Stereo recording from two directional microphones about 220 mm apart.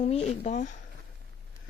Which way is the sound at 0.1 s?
30° left (ahead or behind).